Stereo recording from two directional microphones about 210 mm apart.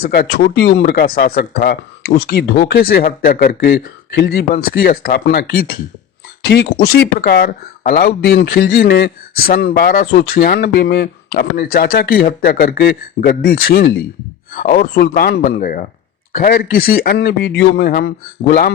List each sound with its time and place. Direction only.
0.0 s speech: 45° left (ahead or behind)